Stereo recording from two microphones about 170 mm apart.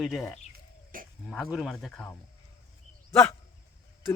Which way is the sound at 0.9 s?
55° right (ahead or behind).